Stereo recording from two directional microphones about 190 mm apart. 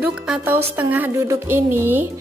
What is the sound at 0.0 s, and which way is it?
A woman's voice, 10° right (ahead or behind).